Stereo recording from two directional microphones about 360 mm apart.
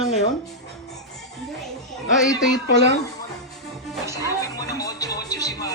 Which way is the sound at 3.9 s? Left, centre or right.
Centre.